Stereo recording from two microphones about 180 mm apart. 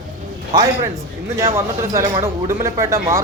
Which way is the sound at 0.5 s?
25° right (ahead or behind).